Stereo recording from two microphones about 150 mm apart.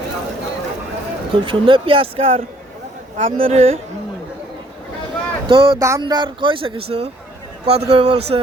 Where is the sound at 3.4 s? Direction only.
45° right (ahead or behind).